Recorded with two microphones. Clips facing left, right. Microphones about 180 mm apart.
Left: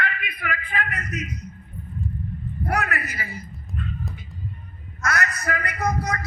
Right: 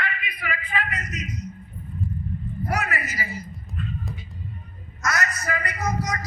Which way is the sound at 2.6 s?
60° left (ahead or behind).